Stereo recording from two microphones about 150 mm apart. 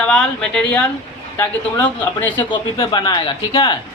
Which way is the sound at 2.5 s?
30° left (ahead or behind).